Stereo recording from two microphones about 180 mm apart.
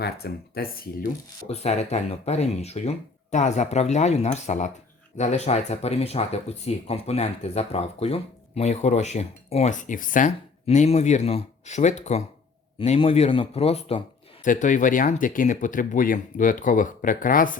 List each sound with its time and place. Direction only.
0.0 s speech: 60° left (ahead or behind)
1.5 s speech: 40° left (ahead or behind)
14.4 s speech: 45° left (ahead or behind)